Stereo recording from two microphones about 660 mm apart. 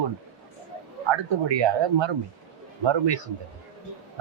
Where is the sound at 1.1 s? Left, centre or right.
Right.